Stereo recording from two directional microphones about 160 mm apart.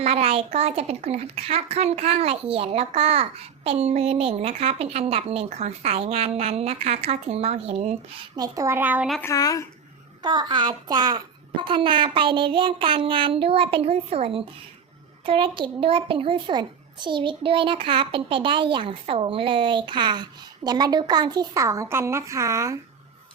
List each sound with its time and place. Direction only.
0.0 s a woman's voice: 40° right (ahead or behind)
8.4 s a child's voice: 20° right (ahead or behind)
9.2 s speech: 20° left (ahead or behind)
10.2 s a woman's voice: 30° right (ahead or behind)